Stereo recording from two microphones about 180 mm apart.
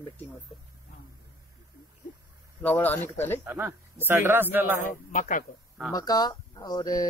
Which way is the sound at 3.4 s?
10° right (ahead or behind).